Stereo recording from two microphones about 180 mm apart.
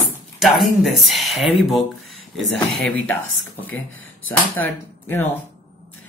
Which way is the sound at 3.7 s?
90° left.